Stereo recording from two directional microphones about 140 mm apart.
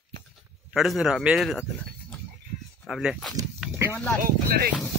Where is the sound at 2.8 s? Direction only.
Centre (ahead or behind).